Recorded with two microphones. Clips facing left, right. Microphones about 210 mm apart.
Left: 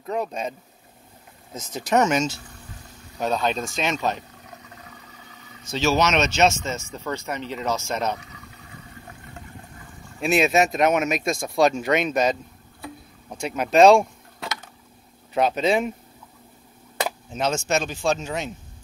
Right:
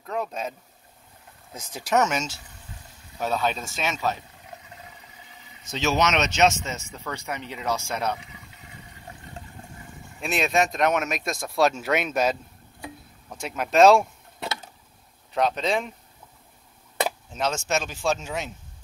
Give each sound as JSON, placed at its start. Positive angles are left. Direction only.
{"t": 0.0, "sound": "speech", "side_deg": 0}
{"t": 1.6, "sound": "speech", "side_deg": -10}
{"t": 5.4, "sound": "vehicle", "side_deg": -20}
{"t": 6.2, "sound": "speech", "side_deg": -15}
{"t": 8.2, "sound": "toilet flush", "side_deg": -25}
{"t": 10.2, "sound": "speech", "side_deg": 5}
{"t": 13.4, "sound": "speech", "side_deg": 0}
{"t": 15.3, "sound": "speech", "side_deg": 5}
{"t": 17.3, "sound": "speech", "side_deg": 0}